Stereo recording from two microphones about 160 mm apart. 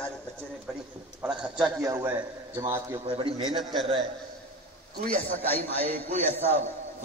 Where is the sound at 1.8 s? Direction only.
20° right (ahead or behind).